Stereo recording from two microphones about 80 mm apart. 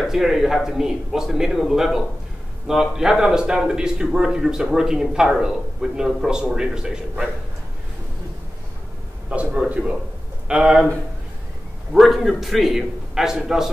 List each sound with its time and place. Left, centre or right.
0.0 s a man's voice: centre
9.3 s a man's voice: centre
11.9 s a man's voice: centre